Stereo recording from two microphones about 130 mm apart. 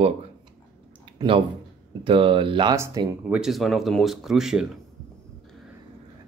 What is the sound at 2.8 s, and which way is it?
Speech, 25° right (ahead or behind).